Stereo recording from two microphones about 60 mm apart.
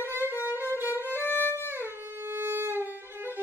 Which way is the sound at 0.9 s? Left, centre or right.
Left.